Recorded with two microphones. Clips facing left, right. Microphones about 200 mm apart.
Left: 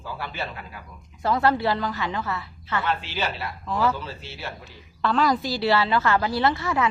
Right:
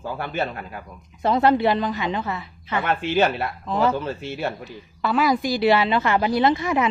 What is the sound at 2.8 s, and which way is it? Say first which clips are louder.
Speech: right 8 dB; 50° right (ahead or behind).